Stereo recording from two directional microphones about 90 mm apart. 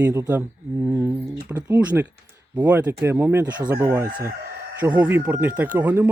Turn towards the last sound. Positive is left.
turn(degrees=-20)  # may be behind; listen again after turning